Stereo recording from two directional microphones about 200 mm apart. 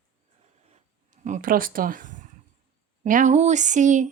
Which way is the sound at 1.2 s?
40° right (ahead or behind).